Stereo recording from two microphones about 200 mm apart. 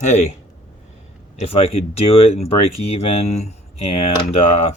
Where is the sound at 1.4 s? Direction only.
30° left (ahead or behind).